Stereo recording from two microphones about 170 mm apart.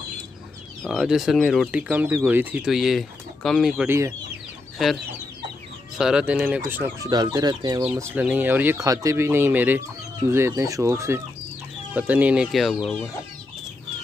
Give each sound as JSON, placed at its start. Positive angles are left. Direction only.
{"t": 0.8, "sound": "speech", "side_deg": 0}
{"t": 1.8, "sound": "speech", "side_deg": -10}
{"t": 3.8, "sound": "speech", "side_deg": -15}
{"t": 5.9, "sound": "speech", "side_deg": -5}
{"t": 7.1, "sound": "speech", "side_deg": -25}